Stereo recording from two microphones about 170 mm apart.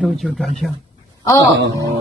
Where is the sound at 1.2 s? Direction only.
20° left (ahead or behind).